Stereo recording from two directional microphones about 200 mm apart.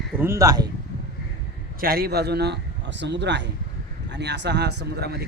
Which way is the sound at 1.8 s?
50° right (ahead or behind).